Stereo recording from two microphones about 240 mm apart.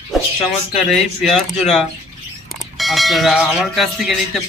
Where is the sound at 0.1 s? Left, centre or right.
Centre.